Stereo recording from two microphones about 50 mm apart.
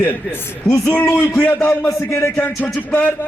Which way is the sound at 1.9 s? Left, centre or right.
Left.